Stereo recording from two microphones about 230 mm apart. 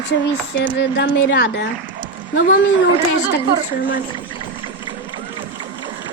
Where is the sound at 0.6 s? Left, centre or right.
Left.